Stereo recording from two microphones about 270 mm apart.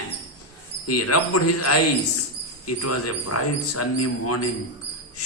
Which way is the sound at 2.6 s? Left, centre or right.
Left.